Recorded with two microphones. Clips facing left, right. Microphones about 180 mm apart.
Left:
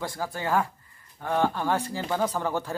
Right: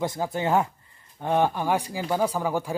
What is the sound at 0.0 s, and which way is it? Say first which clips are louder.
Speech: right 5 dB; 20° right (ahead or behind).